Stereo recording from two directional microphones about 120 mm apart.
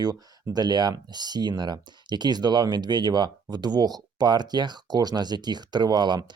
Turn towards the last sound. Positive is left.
turn(degrees=-35)  # may be behind; listen again after turning